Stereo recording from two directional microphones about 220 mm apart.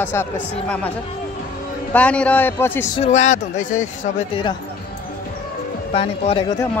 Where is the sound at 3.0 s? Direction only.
30° left (ahead or behind).